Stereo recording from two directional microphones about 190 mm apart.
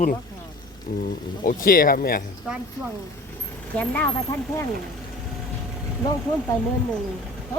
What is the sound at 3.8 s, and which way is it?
Speech, 10° left (ahead or behind).